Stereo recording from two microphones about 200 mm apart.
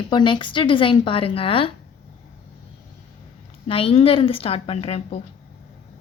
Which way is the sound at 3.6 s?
30° left (ahead or behind).